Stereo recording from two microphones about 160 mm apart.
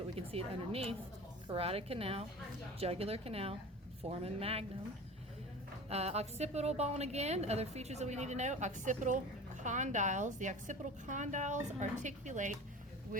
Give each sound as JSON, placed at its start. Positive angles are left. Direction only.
{"t": 0.2, "sound": "a woman's voice", "side_deg": -35}
{"t": 5.9, "sound": "a woman's voice", "side_deg": -40}